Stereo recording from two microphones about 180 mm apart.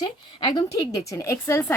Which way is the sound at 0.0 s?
20° left (ahead or behind).